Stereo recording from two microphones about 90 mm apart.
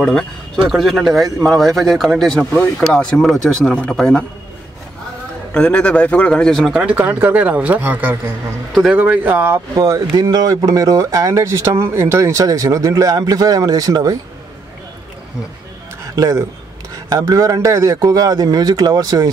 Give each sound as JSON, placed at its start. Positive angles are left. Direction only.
{"t": 0.0, "sound": "a man's voice", "side_deg": 10}
{"t": 5.5, "sound": "a man's voice", "side_deg": 10}
{"t": 6.6, "sound": "speech", "side_deg": -10}
{"t": 7.0, "sound": "speech", "side_deg": -20}
{"t": 10.1, "sound": "speech", "side_deg": -50}
{"t": 16.0, "sound": "a sound", "side_deg": -35}
{"t": 16.9, "sound": "a man's voice", "side_deg": -45}